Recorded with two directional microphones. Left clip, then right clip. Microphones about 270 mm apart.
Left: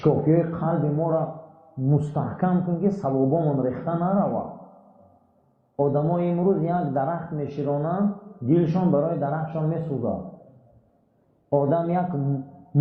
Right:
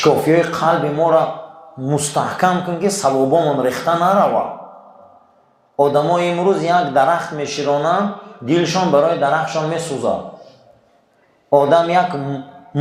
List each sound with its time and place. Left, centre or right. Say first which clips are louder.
0.0 s speech: right 8 dB; centre
5.7 s a man's voice: right 9 dB; right
6.0 s speech: right 9 dB; centre
11.6 s a man's voice: right 12 dB; centre